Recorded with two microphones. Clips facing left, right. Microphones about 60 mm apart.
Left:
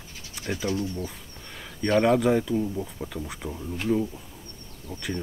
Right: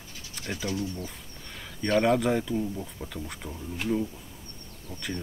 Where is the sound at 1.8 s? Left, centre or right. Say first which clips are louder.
Left 3 dB; centre.